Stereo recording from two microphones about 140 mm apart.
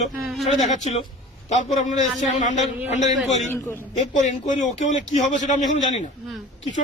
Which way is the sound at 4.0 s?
60° left (ahead or behind).